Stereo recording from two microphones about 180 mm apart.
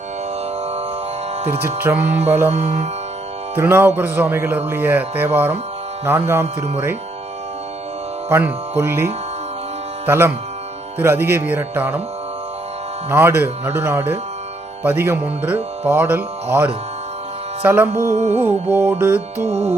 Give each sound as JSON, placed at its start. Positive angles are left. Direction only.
{"t": 1.6, "sound": "speech", "side_deg": -10}
{"t": 2.5, "sound": "music", "side_deg": -40}
{"t": 3.5, "sound": "speech", "side_deg": -15}
{"t": 8.3, "sound": "speech", "side_deg": -10}
{"t": 10.1, "sound": "speech", "side_deg": -15}
{"t": 13.1, "sound": "speech", "side_deg": -15}
{"t": 18.1, "sound": "music", "side_deg": -40}
{"t": 18.3, "sound": "speech", "side_deg": -15}
{"t": 19.5, "sound": "music", "side_deg": -35}